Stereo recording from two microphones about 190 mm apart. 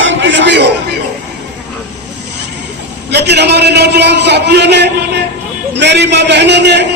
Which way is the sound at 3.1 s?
60° right (ahead or behind).